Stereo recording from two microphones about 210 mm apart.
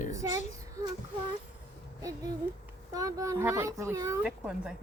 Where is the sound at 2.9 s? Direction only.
15° right (ahead or behind).